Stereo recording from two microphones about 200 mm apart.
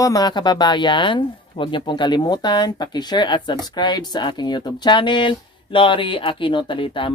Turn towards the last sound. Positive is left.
turn(degrees=25)  # may be behind; listen again after turning